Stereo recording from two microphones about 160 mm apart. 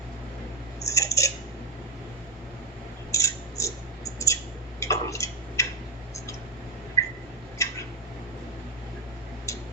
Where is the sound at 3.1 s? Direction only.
20° left (ahead or behind).